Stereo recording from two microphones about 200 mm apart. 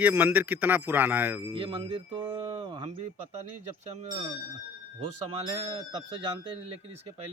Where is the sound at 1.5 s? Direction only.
25° right (ahead or behind).